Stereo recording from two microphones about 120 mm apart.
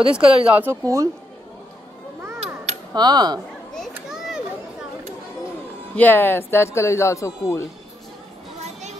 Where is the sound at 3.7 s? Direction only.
Centre (ahead or behind).